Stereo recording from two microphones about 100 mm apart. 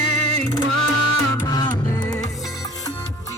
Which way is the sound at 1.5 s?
45° left (ahead or behind).